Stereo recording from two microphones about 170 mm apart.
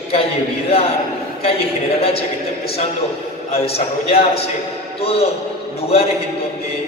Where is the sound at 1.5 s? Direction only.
35° left (ahead or behind).